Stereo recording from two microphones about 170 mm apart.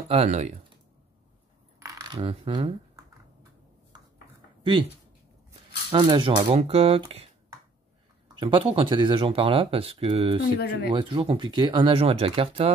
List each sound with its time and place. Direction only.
0.1 s speech: 40° right (ahead or behind)
1.8 s coin: 20° right (ahead or behind)
2.1 s speech: 35° right (ahead or behind)
5.9 s speech: 30° right (ahead or behind)
8.4 s speech: 30° right (ahead or behind)
10.6 s speech: 70° left (ahead or behind)
10.9 s speech: 30° right (ahead or behind)